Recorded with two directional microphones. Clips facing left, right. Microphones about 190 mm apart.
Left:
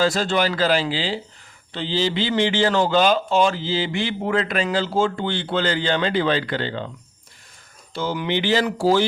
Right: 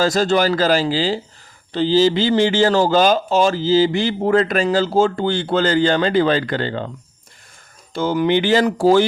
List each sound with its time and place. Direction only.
0.0 s speech: 40° right (ahead or behind)
7.9 s speech: 45° right (ahead or behind)